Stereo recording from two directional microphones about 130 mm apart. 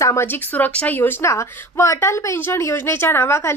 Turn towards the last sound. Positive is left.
turn(degrees=20)  # may be behind; listen again after turning